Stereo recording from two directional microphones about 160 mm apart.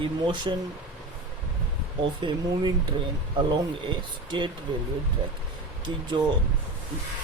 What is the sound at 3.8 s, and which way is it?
Speech, 30° right (ahead or behind).